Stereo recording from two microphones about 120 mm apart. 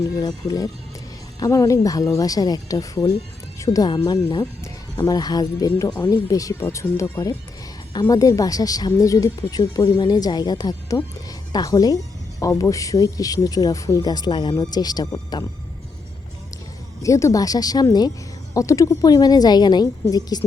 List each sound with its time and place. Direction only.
0.2 s speech: 30° left (ahead or behind)
17.0 s speech: 25° left (ahead or behind)